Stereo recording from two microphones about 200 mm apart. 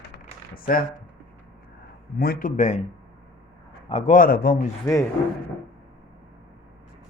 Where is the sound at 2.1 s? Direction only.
50° left (ahead or behind).